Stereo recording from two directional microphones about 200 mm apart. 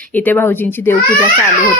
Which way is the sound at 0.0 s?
10° left (ahead or behind).